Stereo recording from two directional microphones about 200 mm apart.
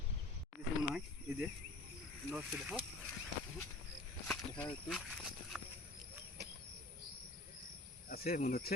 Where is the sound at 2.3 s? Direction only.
5° right (ahead or behind).